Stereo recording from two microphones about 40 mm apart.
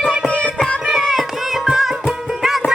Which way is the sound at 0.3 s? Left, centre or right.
Left.